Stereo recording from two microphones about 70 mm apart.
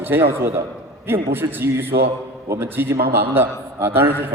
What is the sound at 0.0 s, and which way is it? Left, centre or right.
A man's voice, right.